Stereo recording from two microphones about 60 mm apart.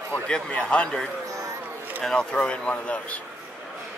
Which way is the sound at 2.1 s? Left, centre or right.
Centre.